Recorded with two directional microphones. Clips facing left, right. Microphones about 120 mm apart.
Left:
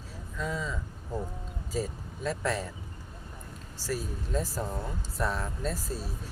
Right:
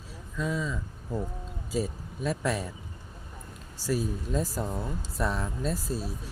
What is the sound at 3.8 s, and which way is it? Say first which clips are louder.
Speech: right 5 dB; 15° right (ahead or behind).